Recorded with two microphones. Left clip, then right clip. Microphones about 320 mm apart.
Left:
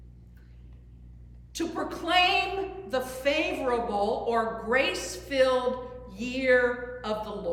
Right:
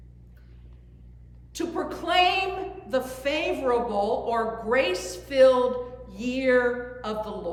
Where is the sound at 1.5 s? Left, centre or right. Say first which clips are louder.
Right 2 dB; centre.